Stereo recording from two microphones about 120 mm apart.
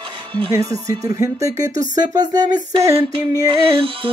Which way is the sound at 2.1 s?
35° right (ahead or behind).